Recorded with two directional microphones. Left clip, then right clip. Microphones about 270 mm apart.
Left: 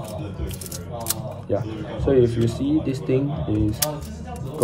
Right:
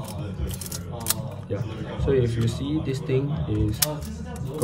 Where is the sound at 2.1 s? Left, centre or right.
Centre.